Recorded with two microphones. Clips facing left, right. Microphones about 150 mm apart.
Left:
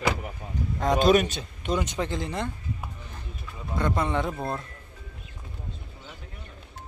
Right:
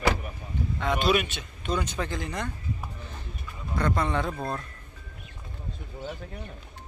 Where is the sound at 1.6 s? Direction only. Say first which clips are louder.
Left 2 dB; 20° left (ahead or behind).